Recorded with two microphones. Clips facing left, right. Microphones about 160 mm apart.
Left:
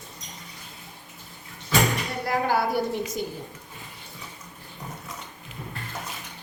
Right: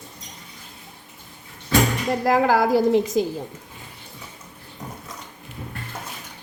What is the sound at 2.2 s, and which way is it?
A woman's voice, 90° right.